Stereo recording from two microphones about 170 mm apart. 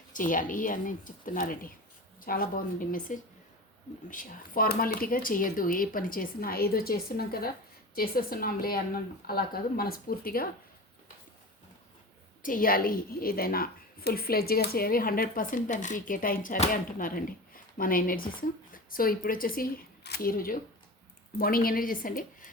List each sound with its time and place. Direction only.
0.1 s a woman's voice: 50° left (ahead or behind)
12.4 s a woman's voice: 55° left (ahead or behind)